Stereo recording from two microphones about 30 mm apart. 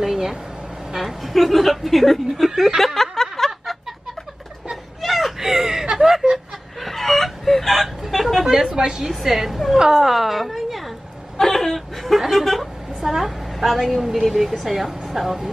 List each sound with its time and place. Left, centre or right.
0.0 s vehicle: centre
0.9 s speech: centre
2.8 s snicker: centre
3.3 s a sound: centre
4.6 s whimper: centre
5.5 s a sound: centre
6.3 s snicker: centre
7.4 s hiccup: centre
8.6 s a woman's voice: right
9.2 s a woman's voice: centre
11.3 s a sound: centre
14.1 s speech: centre